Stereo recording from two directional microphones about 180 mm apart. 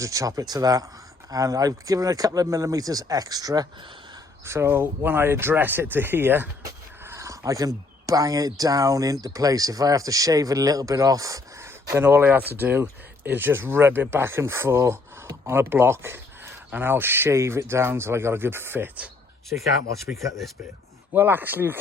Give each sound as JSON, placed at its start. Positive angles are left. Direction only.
{"t": 0.0, "sound": "speech", "side_deg": -20}
{"t": 21.1, "sound": "speech", "side_deg": -10}